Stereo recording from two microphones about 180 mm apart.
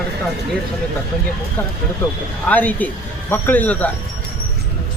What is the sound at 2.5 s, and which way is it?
Speech, 10° left (ahead or behind).